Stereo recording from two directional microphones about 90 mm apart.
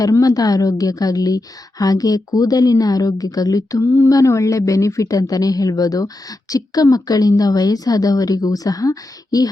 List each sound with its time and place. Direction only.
0.0 s a woman's voice: 45° left (ahead or behind)